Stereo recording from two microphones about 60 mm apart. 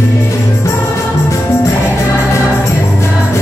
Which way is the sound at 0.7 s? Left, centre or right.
Left.